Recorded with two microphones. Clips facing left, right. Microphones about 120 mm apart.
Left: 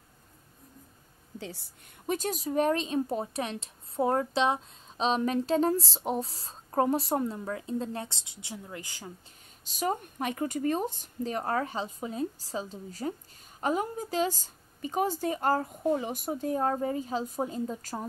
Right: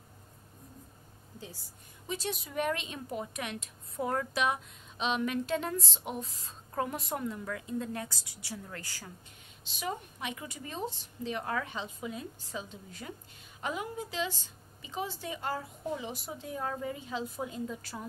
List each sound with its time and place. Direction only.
1.4 s a woman's voice: 70° left (ahead or behind)
2.1 s a woman's voice: 40° left (ahead or behind); by 9.1 s 20° left (ahead or behind)
9.7 s a woman's voice: 45° left (ahead or behind)